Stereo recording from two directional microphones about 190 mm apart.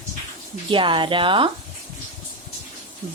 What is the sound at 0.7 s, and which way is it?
Speech, 25° right (ahead or behind).